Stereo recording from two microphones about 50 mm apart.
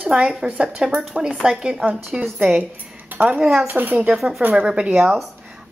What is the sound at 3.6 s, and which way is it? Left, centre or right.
Speech, right.